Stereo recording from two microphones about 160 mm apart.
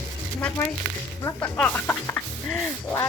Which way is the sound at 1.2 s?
10° left (ahead or behind).